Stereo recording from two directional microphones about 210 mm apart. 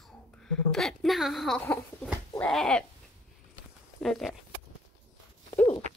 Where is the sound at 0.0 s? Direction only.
5° left (ahead or behind).